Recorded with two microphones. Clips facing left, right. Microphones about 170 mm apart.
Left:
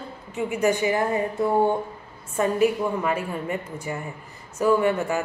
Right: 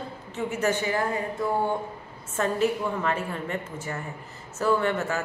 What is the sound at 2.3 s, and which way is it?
A woman's voice, 10° left (ahead or behind).